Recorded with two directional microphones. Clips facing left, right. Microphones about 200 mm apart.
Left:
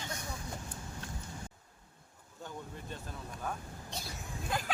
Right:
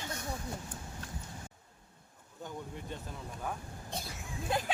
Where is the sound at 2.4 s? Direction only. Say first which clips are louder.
Right 2 dB; 15° right (ahead or behind).